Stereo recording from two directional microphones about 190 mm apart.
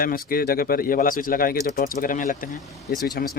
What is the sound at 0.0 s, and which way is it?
Speech, 50° left (ahead or behind).